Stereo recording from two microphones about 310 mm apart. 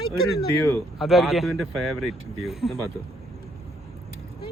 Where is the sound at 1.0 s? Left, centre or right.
Centre.